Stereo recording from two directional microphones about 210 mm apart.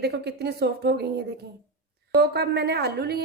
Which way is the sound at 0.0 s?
50° right (ahead or behind).